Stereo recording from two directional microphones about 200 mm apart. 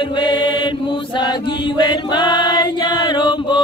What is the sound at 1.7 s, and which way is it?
Chant, 20° left (ahead or behind).